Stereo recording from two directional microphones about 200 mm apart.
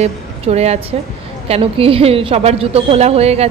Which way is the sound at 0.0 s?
30° right (ahead or behind).